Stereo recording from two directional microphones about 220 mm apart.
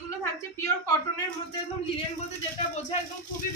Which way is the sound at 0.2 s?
15° left (ahead or behind).